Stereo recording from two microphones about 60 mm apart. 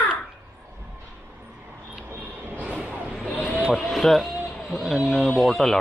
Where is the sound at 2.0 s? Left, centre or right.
Right.